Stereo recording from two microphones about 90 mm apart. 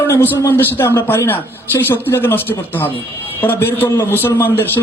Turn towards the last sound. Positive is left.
turn(degrees=25)  # may be behind; listen again after turning